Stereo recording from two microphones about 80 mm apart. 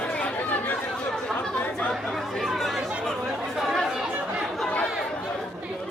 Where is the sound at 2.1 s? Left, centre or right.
Centre.